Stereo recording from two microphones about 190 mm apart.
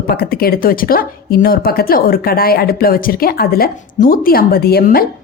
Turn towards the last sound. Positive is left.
turn(degrees=55)  # may be behind; listen again after turning